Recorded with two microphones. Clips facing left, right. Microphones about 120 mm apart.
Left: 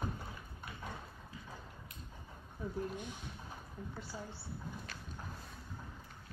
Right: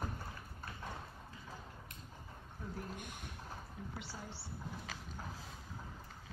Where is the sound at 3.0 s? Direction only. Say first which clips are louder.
Left 3 dB; 55° right (ahead or behind).